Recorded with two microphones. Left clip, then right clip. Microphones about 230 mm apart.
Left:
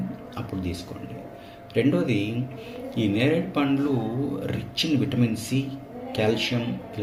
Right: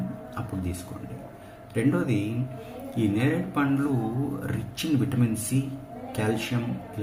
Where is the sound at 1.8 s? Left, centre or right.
Centre.